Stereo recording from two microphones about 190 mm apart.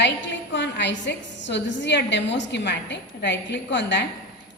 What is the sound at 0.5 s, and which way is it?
A woman's voice, 65° left (ahead or behind).